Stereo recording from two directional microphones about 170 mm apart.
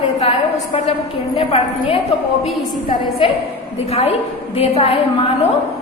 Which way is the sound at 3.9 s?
40° left (ahead or behind).